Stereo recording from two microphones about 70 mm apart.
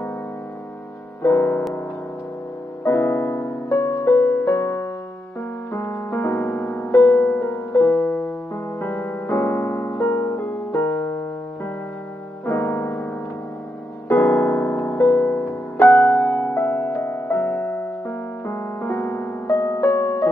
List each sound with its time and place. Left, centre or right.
1.2 s music: left
2.8 s music: left
6.9 s music: left
7.2 s music: left
7.5 s music: left
8.0 s music: left
15.0 s music: left